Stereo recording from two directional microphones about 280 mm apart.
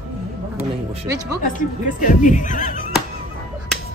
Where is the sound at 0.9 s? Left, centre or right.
Centre.